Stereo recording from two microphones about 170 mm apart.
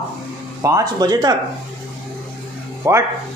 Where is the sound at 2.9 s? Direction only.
15° right (ahead or behind).